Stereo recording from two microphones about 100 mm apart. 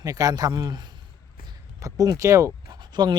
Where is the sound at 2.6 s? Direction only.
50° right (ahead or behind).